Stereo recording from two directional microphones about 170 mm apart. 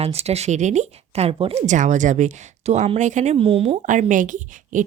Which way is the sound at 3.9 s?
50° right (ahead or behind).